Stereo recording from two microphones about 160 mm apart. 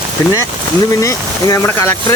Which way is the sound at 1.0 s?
20° left (ahead or behind).